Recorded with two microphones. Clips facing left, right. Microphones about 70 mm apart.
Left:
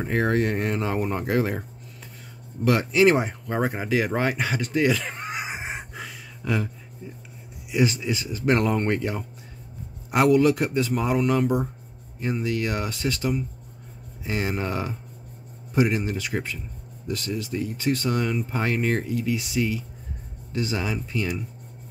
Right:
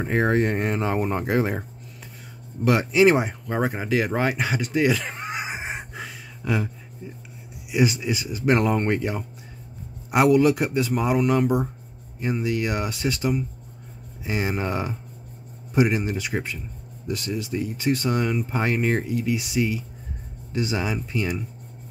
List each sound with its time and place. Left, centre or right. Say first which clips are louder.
0.0 s speech: right 2 dB; right
2.6 s speech: right 1 dB; centre
3.4 s a sound: right 1 dB; centre
7.7 s speech: right 1 dB; centre